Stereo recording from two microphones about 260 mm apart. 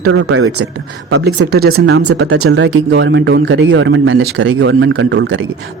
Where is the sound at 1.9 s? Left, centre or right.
Right.